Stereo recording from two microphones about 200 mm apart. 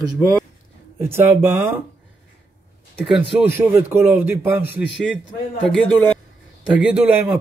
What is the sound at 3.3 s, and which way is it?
Speech, 10° right (ahead or behind).